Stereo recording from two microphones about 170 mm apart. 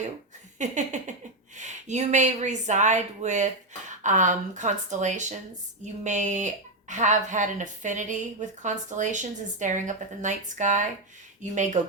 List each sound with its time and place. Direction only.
0.6 s speech: 45° right (ahead or behind)